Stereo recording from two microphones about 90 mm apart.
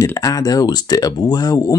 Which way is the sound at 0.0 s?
35° left (ahead or behind).